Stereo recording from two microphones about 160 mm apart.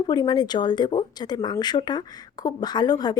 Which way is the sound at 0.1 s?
25° left (ahead or behind).